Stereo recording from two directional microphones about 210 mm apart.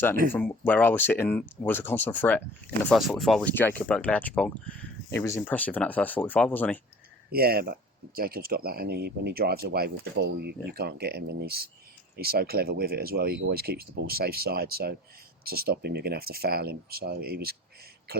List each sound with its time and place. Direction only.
0.3 s speech: 10° left (ahead or behind)
7.3 s speech: 45° right (ahead or behind)